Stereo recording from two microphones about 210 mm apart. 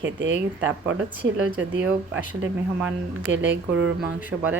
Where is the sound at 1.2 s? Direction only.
5° right (ahead or behind).